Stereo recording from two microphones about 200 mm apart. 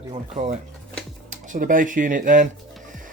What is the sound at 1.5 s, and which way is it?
Speech, 45° right (ahead or behind).